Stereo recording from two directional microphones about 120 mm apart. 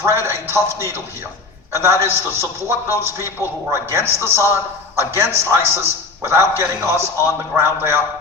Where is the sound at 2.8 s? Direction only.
25° left (ahead or behind).